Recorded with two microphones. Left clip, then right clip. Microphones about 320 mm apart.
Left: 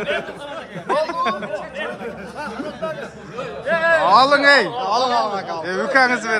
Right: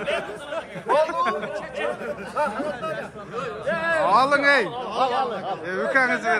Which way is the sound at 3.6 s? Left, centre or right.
Left.